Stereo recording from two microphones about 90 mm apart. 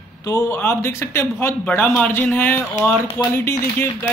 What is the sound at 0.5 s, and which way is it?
Speech, 25° left (ahead or behind).